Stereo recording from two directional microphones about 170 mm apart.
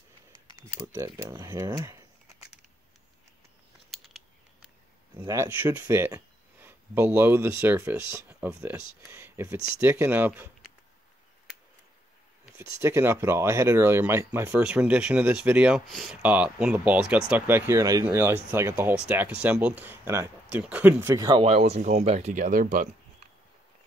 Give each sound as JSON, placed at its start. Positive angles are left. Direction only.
{"t": 0.9, "sound": "speech", "side_deg": -15}
{"t": 3.9, "sound": "a sound", "side_deg": 0}
{"t": 5.1, "sound": "speech", "side_deg": -15}
{"t": 12.5, "sound": "speech", "side_deg": -15}
{"t": 21.4, "sound": "speech", "side_deg": -40}